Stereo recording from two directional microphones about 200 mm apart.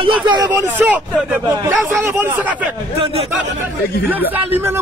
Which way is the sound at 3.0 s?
30° right (ahead or behind).